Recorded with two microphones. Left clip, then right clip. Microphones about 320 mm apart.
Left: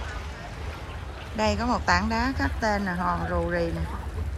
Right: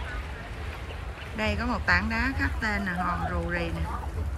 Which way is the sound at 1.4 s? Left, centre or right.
Centre.